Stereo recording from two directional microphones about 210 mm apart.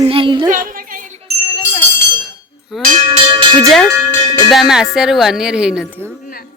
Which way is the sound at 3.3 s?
25° right (ahead or behind).